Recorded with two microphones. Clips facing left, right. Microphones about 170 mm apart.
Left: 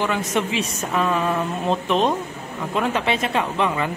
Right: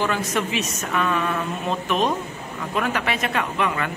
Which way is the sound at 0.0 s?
20° left (ahead or behind).